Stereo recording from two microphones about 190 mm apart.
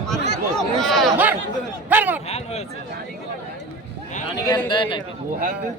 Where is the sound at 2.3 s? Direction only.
35° left (ahead or behind).